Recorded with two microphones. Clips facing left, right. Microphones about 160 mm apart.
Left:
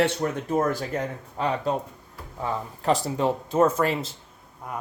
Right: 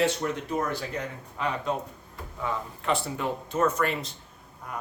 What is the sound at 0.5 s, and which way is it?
Speech, 40° left (ahead or behind).